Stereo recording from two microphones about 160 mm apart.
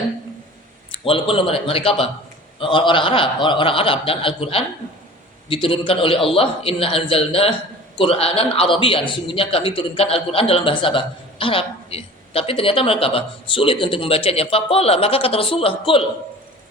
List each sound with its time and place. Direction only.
0.9 s a man's voice: 35° left (ahead or behind)